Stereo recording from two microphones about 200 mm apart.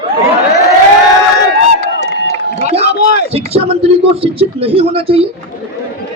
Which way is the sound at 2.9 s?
55° left (ahead or behind).